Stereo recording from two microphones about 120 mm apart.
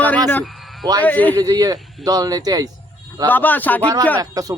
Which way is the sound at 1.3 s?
30° right (ahead or behind).